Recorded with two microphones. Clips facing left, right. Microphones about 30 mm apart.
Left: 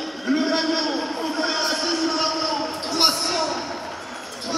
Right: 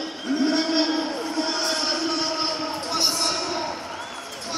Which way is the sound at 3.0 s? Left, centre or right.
Left.